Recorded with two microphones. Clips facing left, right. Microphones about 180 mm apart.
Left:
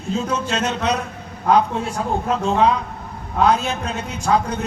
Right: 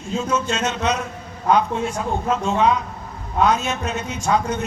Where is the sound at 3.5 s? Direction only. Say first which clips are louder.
Left 4 dB; 35° left (ahead or behind).